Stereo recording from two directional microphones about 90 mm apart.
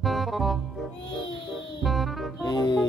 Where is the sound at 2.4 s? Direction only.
50° left (ahead or behind).